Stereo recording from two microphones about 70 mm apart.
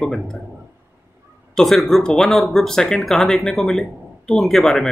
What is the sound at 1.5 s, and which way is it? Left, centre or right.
Speech, centre.